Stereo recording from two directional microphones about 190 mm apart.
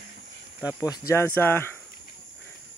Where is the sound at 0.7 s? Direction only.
20° left (ahead or behind).